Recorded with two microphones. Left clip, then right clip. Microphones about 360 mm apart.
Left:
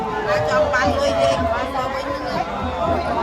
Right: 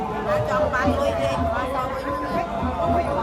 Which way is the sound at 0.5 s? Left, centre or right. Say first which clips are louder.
Left 5 dB; left.